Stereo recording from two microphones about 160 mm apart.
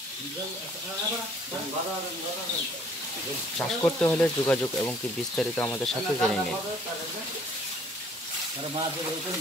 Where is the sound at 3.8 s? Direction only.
10° left (ahead or behind).